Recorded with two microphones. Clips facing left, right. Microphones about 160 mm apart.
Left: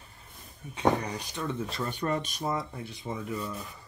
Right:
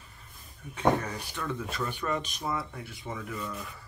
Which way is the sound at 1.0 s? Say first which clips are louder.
Left 1 dB; 20° left (ahead or behind).